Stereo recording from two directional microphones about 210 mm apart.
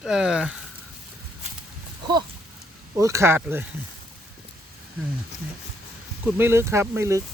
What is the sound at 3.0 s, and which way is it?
Speech, 15° right (ahead or behind).